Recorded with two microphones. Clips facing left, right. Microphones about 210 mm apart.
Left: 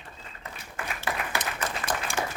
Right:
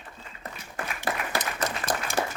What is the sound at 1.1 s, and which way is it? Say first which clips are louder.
Applause: right 2 dB; 35° right (ahead or behind).